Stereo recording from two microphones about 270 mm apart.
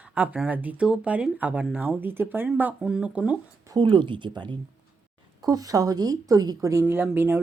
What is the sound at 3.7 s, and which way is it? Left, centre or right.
A woman's voice, centre.